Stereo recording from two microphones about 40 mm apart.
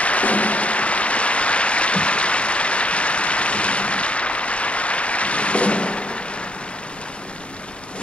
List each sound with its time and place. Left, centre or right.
0.0 s applause: left